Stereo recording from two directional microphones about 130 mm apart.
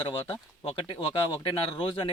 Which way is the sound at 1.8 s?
45° left (ahead or behind).